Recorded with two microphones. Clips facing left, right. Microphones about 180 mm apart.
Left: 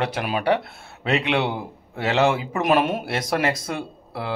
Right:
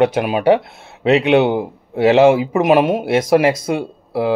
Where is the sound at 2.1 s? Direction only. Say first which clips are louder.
Right 9 dB; 25° right (ahead or behind).